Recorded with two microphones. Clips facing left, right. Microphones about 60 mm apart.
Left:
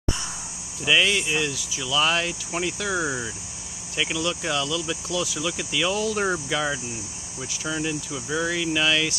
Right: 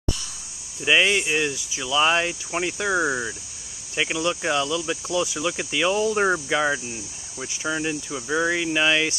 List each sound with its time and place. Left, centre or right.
0.8 s speech: right